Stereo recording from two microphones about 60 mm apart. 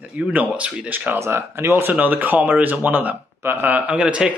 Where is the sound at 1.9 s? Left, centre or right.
Right.